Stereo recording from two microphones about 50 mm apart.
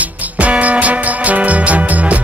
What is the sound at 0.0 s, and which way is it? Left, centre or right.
Music, right.